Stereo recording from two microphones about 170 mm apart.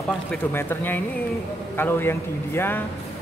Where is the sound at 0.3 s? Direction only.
10° left (ahead or behind).